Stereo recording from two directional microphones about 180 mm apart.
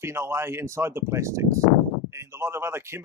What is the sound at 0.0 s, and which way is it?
Speech, 15° right (ahead or behind).